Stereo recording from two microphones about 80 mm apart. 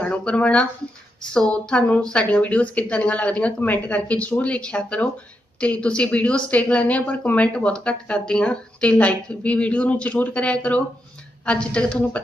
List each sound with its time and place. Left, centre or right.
0.0 s speech: centre